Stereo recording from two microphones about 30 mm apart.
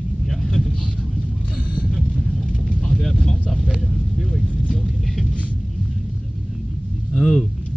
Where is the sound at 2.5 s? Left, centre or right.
Left.